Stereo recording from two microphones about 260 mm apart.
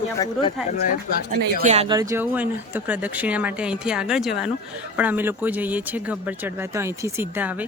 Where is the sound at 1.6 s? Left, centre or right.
Right.